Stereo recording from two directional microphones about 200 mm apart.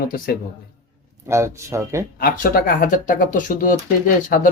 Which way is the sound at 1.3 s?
15° right (ahead or behind).